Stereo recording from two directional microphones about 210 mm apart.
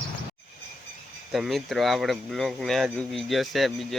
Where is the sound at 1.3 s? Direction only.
Centre (ahead or behind).